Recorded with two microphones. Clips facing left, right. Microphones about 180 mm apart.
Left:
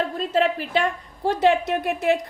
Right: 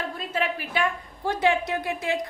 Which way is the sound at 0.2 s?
35° left (ahead or behind).